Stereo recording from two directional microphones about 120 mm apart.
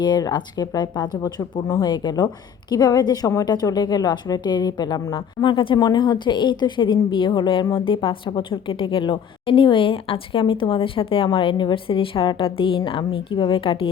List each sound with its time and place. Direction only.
0.0 s a woman's voice: 35° left (ahead or behind)